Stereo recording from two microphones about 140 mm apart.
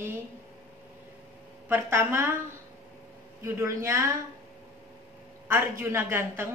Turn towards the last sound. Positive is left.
turn(degrees=-15)  # may be behind; listen again after turning